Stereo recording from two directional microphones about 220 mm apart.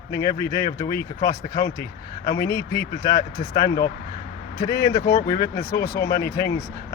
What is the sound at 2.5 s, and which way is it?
Speech, 15° left (ahead or behind).